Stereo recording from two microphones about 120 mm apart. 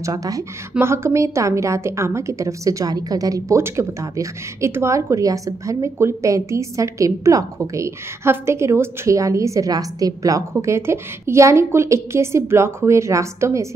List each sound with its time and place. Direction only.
0.0 s a woman's voice: 30° right (ahead or behind)